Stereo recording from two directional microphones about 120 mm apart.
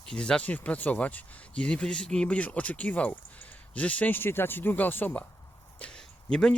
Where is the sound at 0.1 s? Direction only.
5° left (ahead or behind).